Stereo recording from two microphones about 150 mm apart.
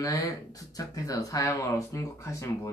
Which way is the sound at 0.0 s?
20° left (ahead or behind).